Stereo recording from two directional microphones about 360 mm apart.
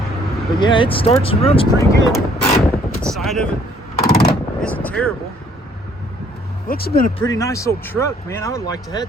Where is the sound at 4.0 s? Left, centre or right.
Left.